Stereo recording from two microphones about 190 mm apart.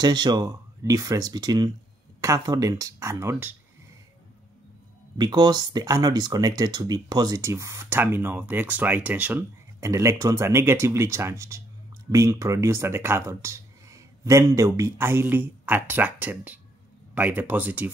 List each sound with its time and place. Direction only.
0.0 s speech: 20° right (ahead or behind)
5.1 s speech: 20° right (ahead or behind)